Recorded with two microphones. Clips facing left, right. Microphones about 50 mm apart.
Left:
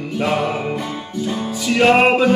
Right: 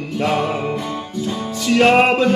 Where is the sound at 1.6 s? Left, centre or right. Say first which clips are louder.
Even; centre.